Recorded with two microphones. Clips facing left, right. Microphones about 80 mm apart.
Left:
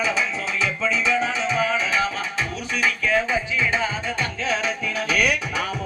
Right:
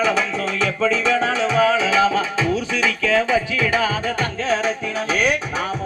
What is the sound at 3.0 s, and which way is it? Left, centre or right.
Music, right.